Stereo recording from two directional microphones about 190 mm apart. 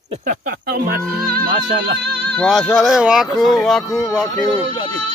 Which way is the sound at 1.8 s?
60° right (ahead or behind).